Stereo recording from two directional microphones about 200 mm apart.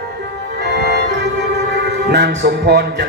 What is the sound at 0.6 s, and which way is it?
Organ, 55° right (ahead or behind).